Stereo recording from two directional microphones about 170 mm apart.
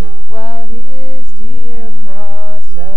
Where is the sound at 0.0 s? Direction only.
25° right (ahead or behind).